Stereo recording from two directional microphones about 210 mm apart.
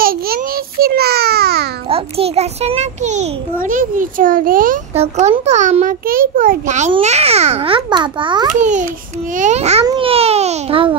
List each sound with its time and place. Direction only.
0.0 s a sound: 45° right (ahead or behind)
1.9 s a child's voice: 25° right (ahead or behind)
4.9 s a child's voice: 30° right (ahead or behind)
8.5 s a child's voice: 35° right (ahead or behind)